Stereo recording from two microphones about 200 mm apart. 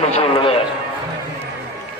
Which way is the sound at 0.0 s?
30° left (ahead or behind).